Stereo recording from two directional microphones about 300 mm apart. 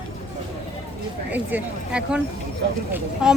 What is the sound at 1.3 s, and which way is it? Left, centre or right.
Speech, centre.